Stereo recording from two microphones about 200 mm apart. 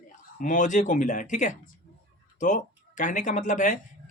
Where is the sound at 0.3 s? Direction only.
40° left (ahead or behind).